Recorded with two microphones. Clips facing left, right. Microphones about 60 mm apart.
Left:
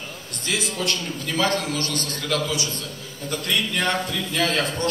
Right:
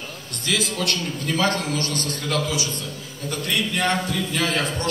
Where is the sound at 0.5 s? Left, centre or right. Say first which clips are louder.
Right 2 dB; left.